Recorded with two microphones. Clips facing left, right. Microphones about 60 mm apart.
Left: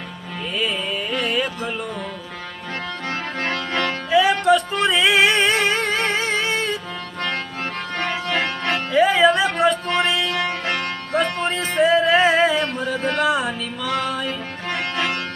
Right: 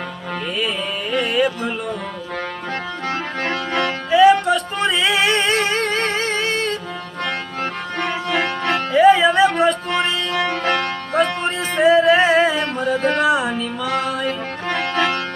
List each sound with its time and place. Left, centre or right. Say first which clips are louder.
1.1 s music: right 6 dB; centre
3.1 s music: right 2 dB; right
3.8 s music: right 4 dB; centre
8.4 s music: right 4 dB; right
8.9 s music: right 3 dB; centre
10.3 s music: right 4 dB; right
11.4 s music: right 2 dB; centre
14.3 s music: right 4 dB; right